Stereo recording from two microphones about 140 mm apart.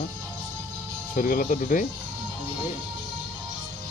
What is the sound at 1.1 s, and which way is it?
Speech, 75° left (ahead or behind).